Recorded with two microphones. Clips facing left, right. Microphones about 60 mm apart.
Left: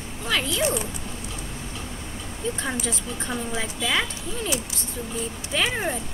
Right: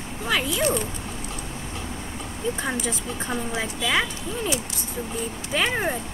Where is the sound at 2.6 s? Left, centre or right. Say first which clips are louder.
Right 1 dB; centre.